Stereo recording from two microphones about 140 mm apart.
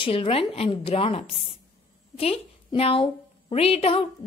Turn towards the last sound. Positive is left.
turn(degrees=40)  # may be behind; listen again after turning